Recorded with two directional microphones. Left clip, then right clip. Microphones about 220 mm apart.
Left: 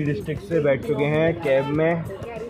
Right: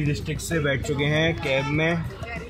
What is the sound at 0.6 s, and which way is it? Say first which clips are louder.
Speech: left 4 dB; 25° left (ahead or behind).